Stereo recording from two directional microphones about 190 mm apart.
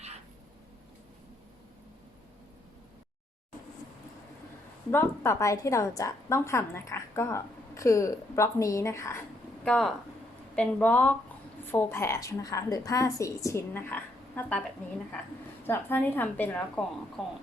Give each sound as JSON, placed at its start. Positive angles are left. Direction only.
{"t": 4.9, "sound": "a woman's voice", "side_deg": 15}
{"t": 9.6, "sound": "a woman's voice", "side_deg": 0}
{"t": 15.6, "sound": "a woman's voice", "side_deg": 10}